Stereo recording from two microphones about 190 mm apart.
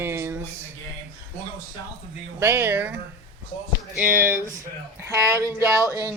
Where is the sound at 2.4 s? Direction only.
10° right (ahead or behind).